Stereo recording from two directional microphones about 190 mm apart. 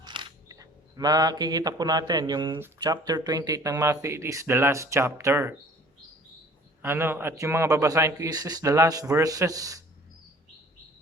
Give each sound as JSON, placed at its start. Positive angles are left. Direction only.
{"t": 0.0, "sound": "speech", "side_deg": -25}
{"t": 6.8, "sound": "speech", "side_deg": -10}